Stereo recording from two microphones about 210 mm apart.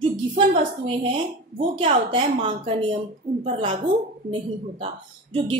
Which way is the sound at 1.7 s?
25° right (ahead or behind).